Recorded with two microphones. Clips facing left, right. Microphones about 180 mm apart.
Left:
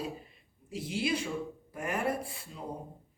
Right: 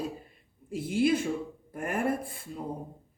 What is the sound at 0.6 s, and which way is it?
Speech, 50° right (ahead or behind).